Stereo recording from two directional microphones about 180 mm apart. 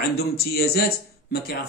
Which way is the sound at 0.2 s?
60° left (ahead or behind).